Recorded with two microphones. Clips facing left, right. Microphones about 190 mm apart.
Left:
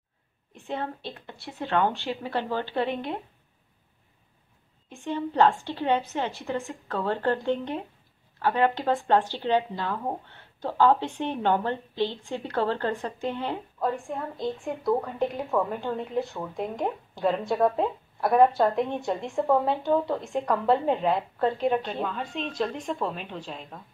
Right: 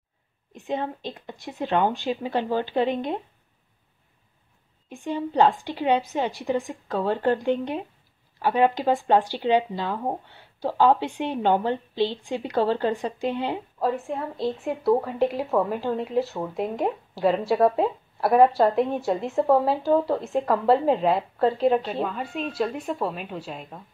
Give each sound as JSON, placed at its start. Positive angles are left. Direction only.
{"t": 0.6, "sound": "speech", "side_deg": -15}
{"t": 5.0, "sound": "a woman's voice", "side_deg": -15}